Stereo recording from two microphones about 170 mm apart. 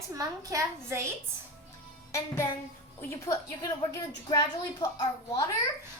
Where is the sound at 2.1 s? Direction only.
15° left (ahead or behind).